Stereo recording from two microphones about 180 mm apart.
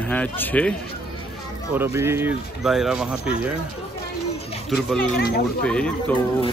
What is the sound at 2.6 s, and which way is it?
Speech, centre (ahead or behind).